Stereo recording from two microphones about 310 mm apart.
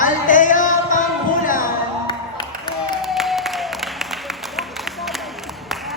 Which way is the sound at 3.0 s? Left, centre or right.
Centre.